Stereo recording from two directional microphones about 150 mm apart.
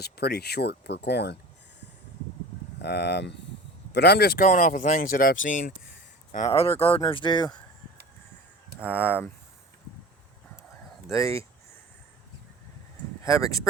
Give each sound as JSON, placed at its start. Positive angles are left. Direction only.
{"t": 0.0, "sound": "speech", "side_deg": 90}
{"t": 2.8, "sound": "speech", "side_deg": 90}
{"t": 6.5, "sound": "speech", "side_deg": 40}
{"t": 8.9, "sound": "speech", "side_deg": 15}
{"t": 11.1, "sound": "speech", "side_deg": 20}
{"t": 13.2, "sound": "speech", "side_deg": 20}